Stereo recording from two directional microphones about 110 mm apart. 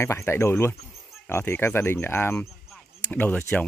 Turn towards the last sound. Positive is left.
turn(degrees=15)  # may be behind; listen again after turning